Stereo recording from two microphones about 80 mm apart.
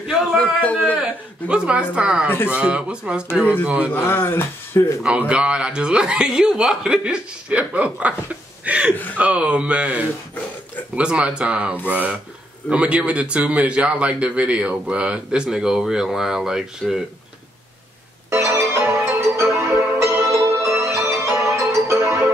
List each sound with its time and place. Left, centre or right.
0.0 s a man's voice: centre
0.4 s a man's voice: centre
0.9 s a man's voice: centre
2.2 s speech: left
2.5 s a man's voice: centre
3.9 s speech: left
5.0 s a man's voice: centre
8.9 s speech: left
9.2 s a man's voice: centre
18.3 s music: right